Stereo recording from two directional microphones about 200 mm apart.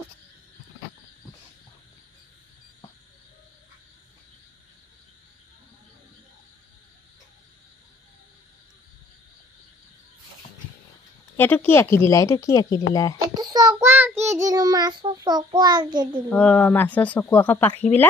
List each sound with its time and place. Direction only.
11.3 s speech: 10° left (ahead or behind)
13.3 s child singing: 20° right (ahead or behind)
16.3 s speech: 10° left (ahead or behind)